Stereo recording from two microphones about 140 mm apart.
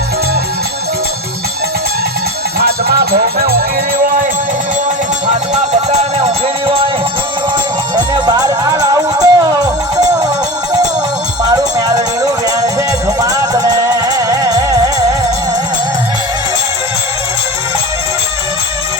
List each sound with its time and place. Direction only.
2.6 s music: 90° right
5.9 s music: 50° right (ahead or behind)
7.9 s music: 30° right (ahead or behind)
11.4 s music: 30° right (ahead or behind)